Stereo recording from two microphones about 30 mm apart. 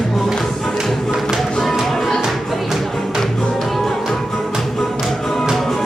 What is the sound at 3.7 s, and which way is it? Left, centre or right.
Music, centre.